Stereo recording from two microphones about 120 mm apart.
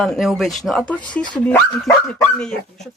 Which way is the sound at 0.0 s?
Centre (ahead or behind).